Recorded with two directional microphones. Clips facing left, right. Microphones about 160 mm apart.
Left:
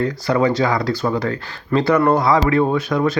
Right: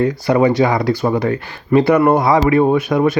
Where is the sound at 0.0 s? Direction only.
15° right (ahead or behind).